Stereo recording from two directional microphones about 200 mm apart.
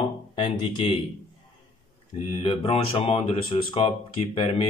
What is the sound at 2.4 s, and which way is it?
A man's voice, 25° left (ahead or behind).